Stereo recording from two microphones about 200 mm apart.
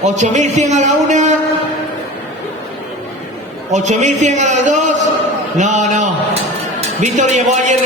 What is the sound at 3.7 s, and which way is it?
A man's voice, 35° right (ahead or behind).